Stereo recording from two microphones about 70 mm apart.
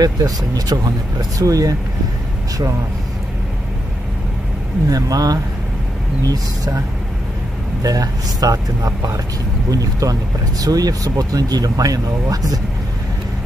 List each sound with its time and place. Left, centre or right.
0.0 s speech: right
4.8 s speech: right
7.8 s speech: right